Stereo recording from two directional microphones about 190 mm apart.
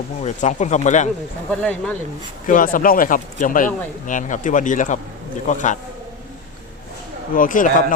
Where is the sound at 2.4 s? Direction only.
45° left (ahead or behind).